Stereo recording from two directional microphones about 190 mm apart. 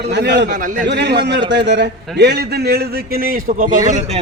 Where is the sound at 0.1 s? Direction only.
65° right (ahead or behind); by 3.8 s 45° right (ahead or behind).